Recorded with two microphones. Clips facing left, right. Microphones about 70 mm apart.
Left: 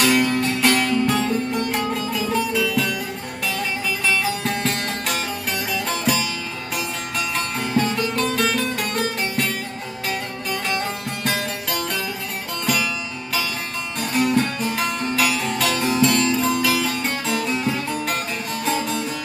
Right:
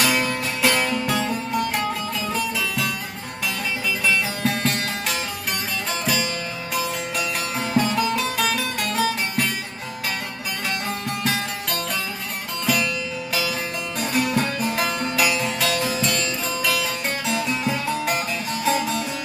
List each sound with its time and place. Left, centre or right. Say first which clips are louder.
0.0 s music: left 4 dB; centre
4.0 s music: even; centre
7.2 s music: left 3 dB; centre
11.2 s music: left 2 dB; centre
12.6 s music: even; centre
14.0 s music: left 3 dB; centre